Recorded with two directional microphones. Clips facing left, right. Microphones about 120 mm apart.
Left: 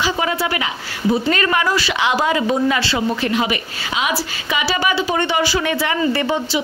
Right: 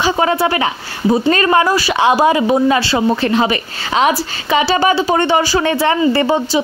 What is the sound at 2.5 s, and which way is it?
A woman's voice, 35° right (ahead or behind).